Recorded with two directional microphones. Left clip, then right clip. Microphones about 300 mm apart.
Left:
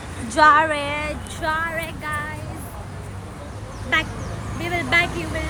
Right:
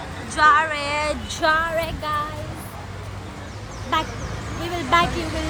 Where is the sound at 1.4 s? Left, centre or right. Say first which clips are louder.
Right 4 dB; right.